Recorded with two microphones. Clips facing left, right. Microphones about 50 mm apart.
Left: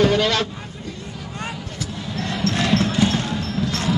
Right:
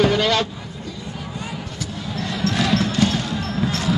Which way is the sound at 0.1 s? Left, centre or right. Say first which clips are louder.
Even; centre.